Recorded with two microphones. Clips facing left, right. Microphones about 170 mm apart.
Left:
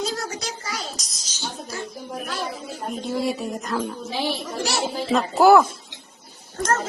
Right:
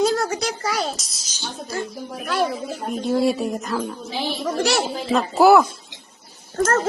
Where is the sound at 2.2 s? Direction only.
65° right (ahead or behind).